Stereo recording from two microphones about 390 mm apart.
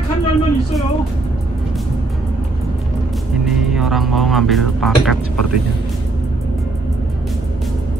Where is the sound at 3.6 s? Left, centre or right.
Centre.